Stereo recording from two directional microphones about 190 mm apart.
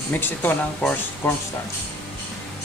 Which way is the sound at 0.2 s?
10° left (ahead or behind).